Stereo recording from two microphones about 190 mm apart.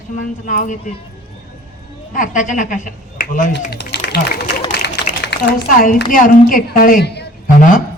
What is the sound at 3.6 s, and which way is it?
A woman's voice, 55° left (ahead or behind).